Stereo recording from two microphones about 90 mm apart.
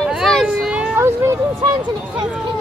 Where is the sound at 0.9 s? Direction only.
30° right (ahead or behind).